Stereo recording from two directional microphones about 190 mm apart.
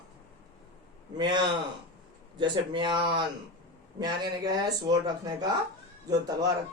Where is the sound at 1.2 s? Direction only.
25° right (ahead or behind).